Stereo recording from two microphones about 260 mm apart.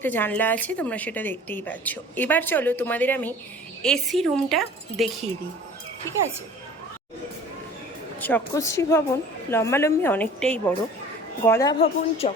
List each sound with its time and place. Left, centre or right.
0.0 s a woman's voice: centre
8.2 s a woman's voice: centre